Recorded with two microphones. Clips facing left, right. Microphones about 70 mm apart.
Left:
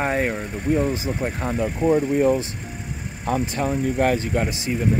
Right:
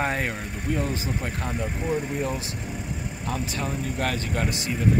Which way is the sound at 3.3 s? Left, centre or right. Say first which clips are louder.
Left 7 dB; left.